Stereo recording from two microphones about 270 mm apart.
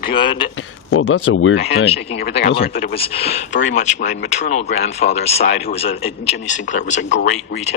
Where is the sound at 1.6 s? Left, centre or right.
Left.